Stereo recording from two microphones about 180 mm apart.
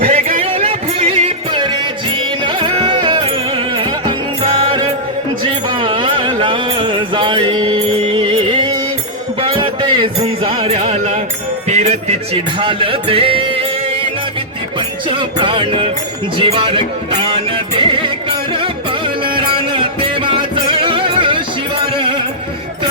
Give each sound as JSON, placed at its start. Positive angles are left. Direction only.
{"t": 0.0, "sound": "music", "side_deg": -35}
{"t": 5.4, "sound": "a sound", "side_deg": -25}
{"t": 9.4, "sound": "music", "side_deg": -30}